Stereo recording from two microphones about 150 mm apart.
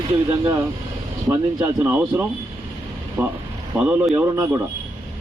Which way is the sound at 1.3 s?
15° right (ahead or behind).